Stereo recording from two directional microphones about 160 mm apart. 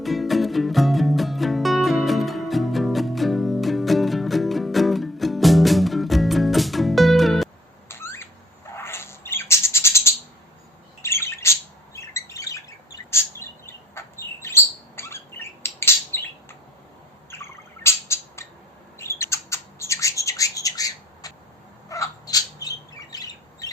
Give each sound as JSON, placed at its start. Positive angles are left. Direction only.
{"t": 0.0, "sound": "music", "side_deg": 0}
{"t": 7.9, "sound": "a sound", "side_deg": 15}
{"t": 8.7, "sound": "bird", "side_deg": 15}
{"t": 18.9, "sound": "squawk", "side_deg": 15}
{"t": 21.8, "sound": "bird", "side_deg": 20}